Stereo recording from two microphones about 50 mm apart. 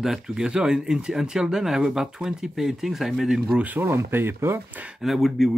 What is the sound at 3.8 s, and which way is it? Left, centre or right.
Speech, right.